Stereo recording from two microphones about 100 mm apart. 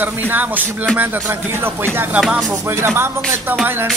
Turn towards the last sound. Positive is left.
turn(degrees=-20)  # may be behind; listen again after turning